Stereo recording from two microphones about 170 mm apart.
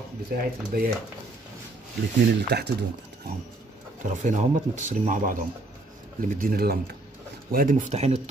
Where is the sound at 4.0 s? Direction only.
45° right (ahead or behind).